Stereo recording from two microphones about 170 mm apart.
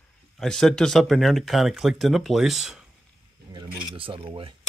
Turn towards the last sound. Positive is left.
turn(degrees=-30)  # may be behind; listen again after turning